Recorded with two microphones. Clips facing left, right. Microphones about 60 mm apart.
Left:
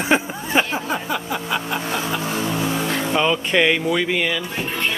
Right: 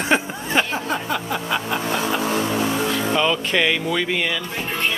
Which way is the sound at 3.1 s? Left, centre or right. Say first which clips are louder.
Left 3 dB; centre.